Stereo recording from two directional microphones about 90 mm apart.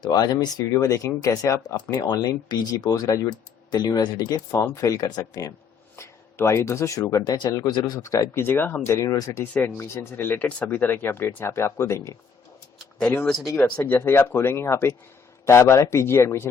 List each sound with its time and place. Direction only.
0.0 s speech: 50° left (ahead or behind)
1.6 s speech: 45° left (ahead or behind)
6.0 s speech: 30° left (ahead or behind)
7.3 s speech: 50° left (ahead or behind)
8.4 s speech: 25° left (ahead or behind)
9.0 s speech: 40° left (ahead or behind)
9.5 s speech: 20° left (ahead or behind)
13.2 s speech: centre (ahead or behind)
13.6 s speech: 15° left (ahead or behind)